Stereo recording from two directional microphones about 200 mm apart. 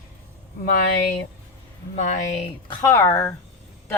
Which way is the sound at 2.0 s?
35° left (ahead or behind).